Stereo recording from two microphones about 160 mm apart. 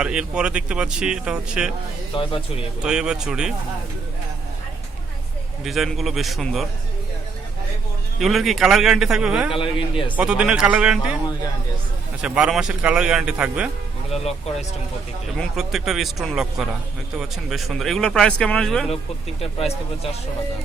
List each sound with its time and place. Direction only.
0.0 s speech: 5° right (ahead or behind)
2.1 s speech: 35° left (ahead or behind)
2.8 s speech: 5° right (ahead or behind)
5.6 s speech: centre (ahead or behind)
8.2 s speech: centre (ahead or behind)
9.5 s speech: 30° left (ahead or behind)
10.2 s speech: 5° right (ahead or behind)
12.2 s speech: 5° right (ahead or behind)
14.1 s speech: 40° left (ahead or behind)
15.4 s speech: centre (ahead or behind)
19.4 s speech: 40° left (ahead or behind)